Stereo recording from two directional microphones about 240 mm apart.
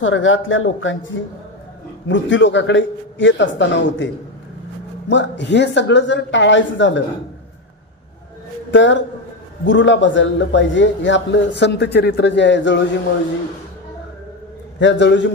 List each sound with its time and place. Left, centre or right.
0.0 s a man's voice: left
5.1 s a man's voice: left
8.7 s a man's voice: left
14.8 s a man's voice: left